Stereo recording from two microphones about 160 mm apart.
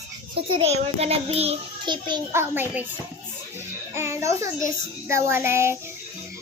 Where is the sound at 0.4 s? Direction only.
40° right (ahead or behind).